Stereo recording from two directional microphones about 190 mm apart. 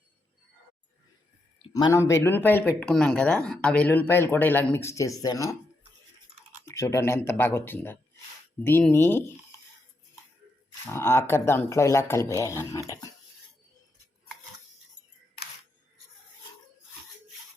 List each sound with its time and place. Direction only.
1.7 s speech: 15° left (ahead or behind)
6.7 s speech: 15° left (ahead or behind)
10.8 s speech: 15° left (ahead or behind)
12.9 s a sound: 20° left (ahead or behind)